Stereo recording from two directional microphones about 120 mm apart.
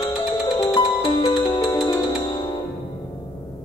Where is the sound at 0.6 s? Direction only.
40° left (ahead or behind).